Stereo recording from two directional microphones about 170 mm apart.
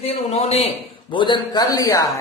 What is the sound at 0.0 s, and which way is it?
A man's voice, 35° left (ahead or behind).